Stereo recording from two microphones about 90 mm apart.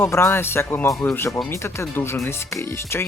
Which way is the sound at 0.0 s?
30° left (ahead or behind).